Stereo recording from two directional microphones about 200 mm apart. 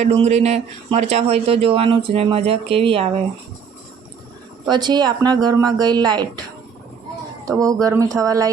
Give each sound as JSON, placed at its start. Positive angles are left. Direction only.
{"t": 0.0, "sound": "speech", "side_deg": -35}
{"t": 4.7, "sound": "speech", "side_deg": -20}
{"t": 7.4, "sound": "speech", "side_deg": -15}